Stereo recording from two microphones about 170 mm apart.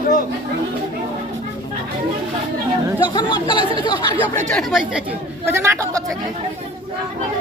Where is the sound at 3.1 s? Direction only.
30° left (ahead or behind).